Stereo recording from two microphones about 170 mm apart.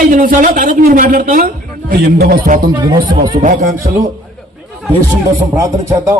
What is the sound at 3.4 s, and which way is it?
Speech, 50° right (ahead or behind).